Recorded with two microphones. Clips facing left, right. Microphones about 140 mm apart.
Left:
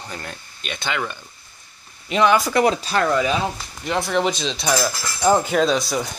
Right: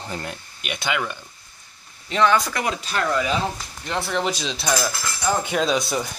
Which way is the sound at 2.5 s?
30° left (ahead or behind).